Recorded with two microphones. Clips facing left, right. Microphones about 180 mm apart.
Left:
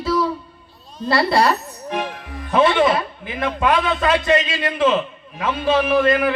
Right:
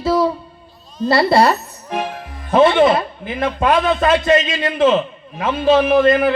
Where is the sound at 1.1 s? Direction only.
25° right (ahead or behind).